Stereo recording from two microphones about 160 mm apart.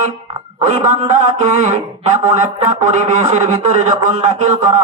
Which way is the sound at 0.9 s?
45° right (ahead or behind).